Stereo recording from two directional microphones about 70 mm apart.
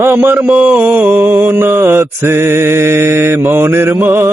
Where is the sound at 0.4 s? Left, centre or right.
Centre.